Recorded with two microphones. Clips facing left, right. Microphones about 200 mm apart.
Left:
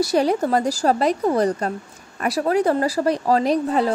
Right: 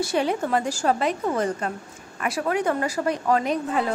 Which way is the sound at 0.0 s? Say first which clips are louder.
Left 5 dB; 40° left (ahead or behind).